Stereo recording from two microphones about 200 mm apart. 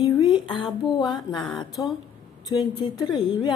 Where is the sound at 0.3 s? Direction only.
20° left (ahead or behind).